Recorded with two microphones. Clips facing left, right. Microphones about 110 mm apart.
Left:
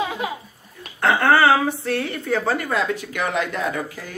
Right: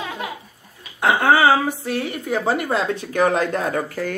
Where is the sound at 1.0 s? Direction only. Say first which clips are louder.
Right 1 dB; 10° right (ahead or behind).